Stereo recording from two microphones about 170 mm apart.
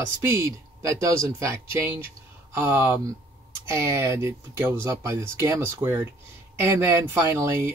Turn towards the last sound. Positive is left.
turn(degrees=-15)  # may be behind; listen again after turning